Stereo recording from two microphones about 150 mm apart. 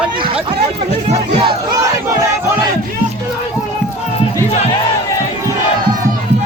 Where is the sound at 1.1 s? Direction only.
45° right (ahead or behind).